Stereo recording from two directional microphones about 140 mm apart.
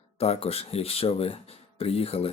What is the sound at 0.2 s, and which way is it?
Speech, 45° left (ahead or behind).